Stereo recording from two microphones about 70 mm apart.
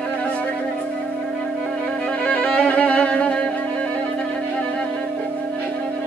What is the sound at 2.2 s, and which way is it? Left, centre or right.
Violin, centre.